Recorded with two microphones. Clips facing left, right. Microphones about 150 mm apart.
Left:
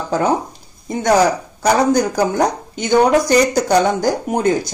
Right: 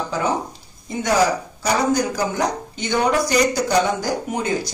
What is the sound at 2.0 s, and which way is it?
A woman's voice, 45° left (ahead or behind).